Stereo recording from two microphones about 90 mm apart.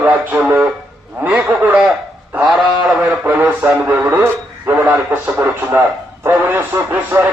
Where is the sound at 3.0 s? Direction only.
20° right (ahead or behind).